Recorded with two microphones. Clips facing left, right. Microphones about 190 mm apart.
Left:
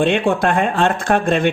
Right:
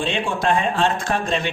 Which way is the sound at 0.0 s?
60° left (ahead or behind).